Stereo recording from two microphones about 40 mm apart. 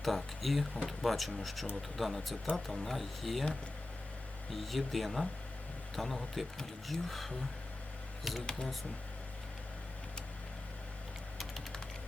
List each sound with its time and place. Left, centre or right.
0.0 s speech: centre
4.5 s speech: centre
8.4 s speech: centre